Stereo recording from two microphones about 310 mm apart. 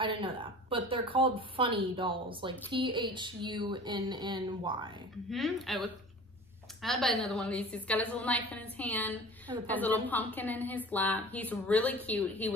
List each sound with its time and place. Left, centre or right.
0.0 s speech: centre
5.3 s a woman's voice: centre